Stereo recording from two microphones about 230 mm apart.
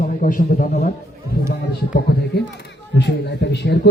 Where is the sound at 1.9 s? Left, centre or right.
Left.